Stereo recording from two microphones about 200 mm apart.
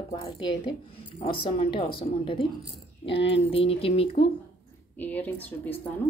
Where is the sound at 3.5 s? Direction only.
30° left (ahead or behind).